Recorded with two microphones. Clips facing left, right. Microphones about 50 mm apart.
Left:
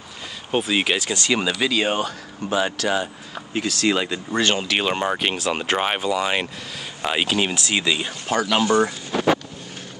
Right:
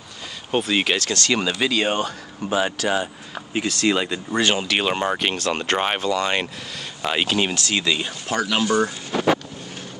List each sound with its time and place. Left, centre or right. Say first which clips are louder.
0.5 s speech: even; centre
1.5 s speech: even; centre
7.5 s speech: even; centre
8.6 s speech: left 1 dB; left